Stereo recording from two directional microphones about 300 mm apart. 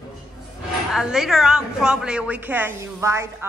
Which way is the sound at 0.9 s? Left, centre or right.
Centre.